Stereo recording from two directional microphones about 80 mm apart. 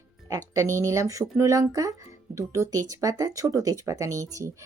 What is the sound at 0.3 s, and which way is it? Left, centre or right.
Speech, right.